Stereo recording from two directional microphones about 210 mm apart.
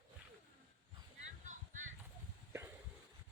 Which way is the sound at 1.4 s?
35° right (ahead or behind).